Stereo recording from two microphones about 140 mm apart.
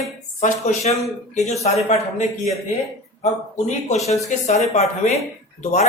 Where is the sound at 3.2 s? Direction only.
55° left (ahead or behind).